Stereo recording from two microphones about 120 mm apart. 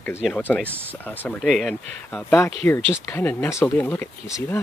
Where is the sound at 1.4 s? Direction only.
Centre (ahead or behind); by 4.6 s 20° left (ahead or behind).